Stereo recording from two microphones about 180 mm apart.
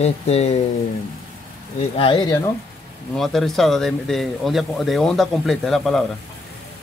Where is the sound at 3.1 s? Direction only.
Centre (ahead or behind).